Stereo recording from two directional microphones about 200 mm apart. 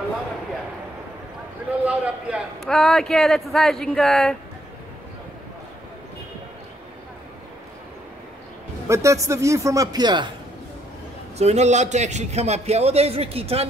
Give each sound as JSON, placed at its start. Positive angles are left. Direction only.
{"t": 1.9, "sound": "a man's voice", "side_deg": -5}
{"t": 8.8, "sound": "a man's voice", "side_deg": -15}
{"t": 11.3, "sound": "a man's voice", "side_deg": -35}